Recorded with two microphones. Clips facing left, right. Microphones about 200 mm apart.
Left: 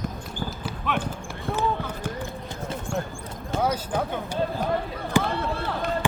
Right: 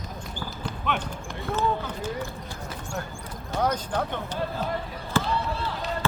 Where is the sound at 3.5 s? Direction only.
5° left (ahead or behind).